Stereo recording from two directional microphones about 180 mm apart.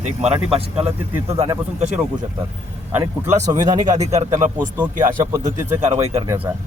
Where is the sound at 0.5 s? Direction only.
35° right (ahead or behind).